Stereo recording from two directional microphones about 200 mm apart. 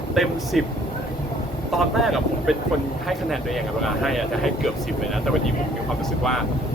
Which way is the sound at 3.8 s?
Centre (ahead or behind).